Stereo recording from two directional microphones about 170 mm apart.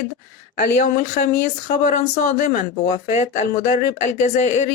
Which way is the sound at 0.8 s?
45° left (ahead or behind).